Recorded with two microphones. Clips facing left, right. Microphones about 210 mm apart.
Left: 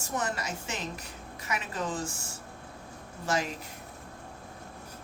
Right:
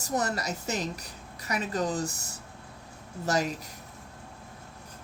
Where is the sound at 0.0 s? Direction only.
40° right (ahead or behind).